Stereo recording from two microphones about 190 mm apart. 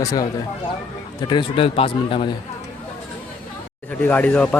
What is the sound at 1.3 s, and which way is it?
Speech, 25° left (ahead or behind).